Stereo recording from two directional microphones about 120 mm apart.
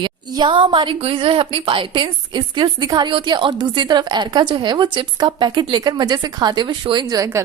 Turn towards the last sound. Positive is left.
turn(degrees=-25)  # may be behind; listen again after turning